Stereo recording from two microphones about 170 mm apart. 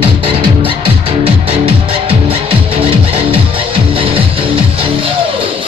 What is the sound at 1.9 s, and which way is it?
Music, 35° right (ahead or behind).